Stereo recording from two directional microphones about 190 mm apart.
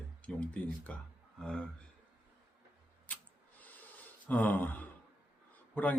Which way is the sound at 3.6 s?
10° left (ahead or behind).